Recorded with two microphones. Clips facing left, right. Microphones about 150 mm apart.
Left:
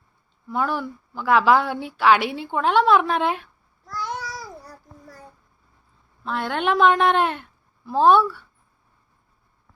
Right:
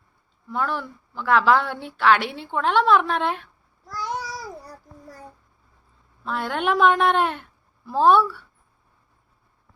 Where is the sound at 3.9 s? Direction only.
35° right (ahead or behind).